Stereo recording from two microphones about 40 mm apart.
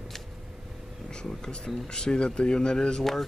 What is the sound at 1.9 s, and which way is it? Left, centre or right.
Speech, left.